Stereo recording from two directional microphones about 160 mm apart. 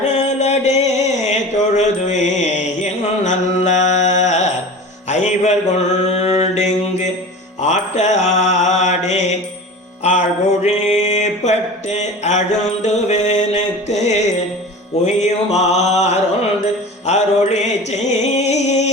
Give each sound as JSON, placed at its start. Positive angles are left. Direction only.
{"t": 0.1, "sound": "mantra", "side_deg": 45}
{"t": 5.0, "sound": "music", "side_deg": 45}
{"t": 6.1, "sound": "mantra", "side_deg": 45}
{"t": 10.0, "sound": "music", "side_deg": 45}
{"t": 15.0, "sound": "mantra", "side_deg": 45}
{"t": 17.1, "sound": "music", "side_deg": 45}